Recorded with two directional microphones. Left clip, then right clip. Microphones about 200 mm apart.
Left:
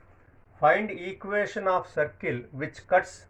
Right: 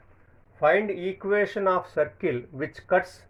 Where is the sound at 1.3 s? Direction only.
50° right (ahead or behind).